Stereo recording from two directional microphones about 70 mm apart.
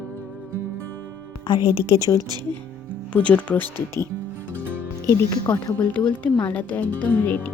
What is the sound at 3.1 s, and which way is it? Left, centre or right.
Speech, centre.